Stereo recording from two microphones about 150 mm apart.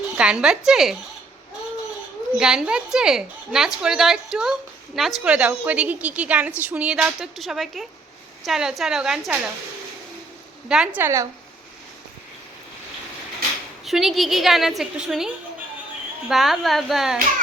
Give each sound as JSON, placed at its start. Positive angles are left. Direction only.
{"t": 0.2, "sound": "a woman's voice", "side_deg": -5}
{"t": 2.4, "sound": "a woman's voice", "side_deg": -5}
{"t": 10.7, "sound": "a woman's voice", "side_deg": -5}
{"t": 11.0, "sound": "speech", "side_deg": -20}
{"t": 13.8, "sound": "a woman's voice", "side_deg": 0}
{"t": 16.3, "sound": "a woman's voice", "side_deg": 0}